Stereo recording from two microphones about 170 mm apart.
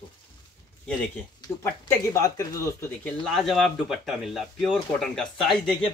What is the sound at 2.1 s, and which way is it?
Speech, 20° left (ahead or behind).